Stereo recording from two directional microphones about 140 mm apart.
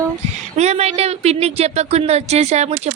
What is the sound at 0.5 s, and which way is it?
Speech, 50° right (ahead or behind).